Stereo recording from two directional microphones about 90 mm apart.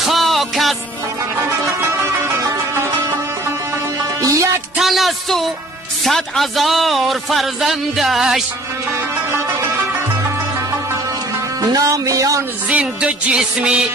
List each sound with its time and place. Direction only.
0.0 s music: centre (ahead or behind)
1.9 s music: 30° right (ahead or behind)
4.2 s music: 40° right (ahead or behind)
4.7 s music: centre (ahead or behind)
6.0 s a man's voice: centre (ahead or behind)
11.6 s speech: 40° right (ahead or behind)
12.6 s music: 10° right (ahead or behind)